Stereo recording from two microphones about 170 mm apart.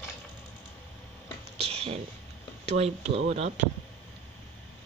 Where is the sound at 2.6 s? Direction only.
40° right (ahead or behind).